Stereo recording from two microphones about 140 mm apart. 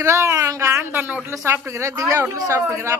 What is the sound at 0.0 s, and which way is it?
A woman's voice, 20° right (ahead or behind).